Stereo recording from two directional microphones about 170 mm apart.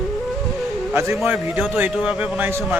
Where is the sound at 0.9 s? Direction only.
10° right (ahead or behind).